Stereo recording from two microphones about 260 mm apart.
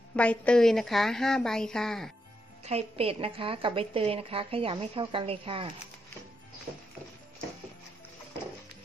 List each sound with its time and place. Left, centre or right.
0.1 s a woman's voice: centre
2.6 s a woman's voice: right